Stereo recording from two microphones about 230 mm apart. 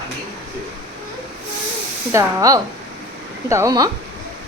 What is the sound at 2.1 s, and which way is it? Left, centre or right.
A woman's voice, centre.